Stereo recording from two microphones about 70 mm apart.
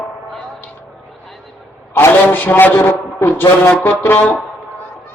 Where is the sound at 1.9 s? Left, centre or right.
Left.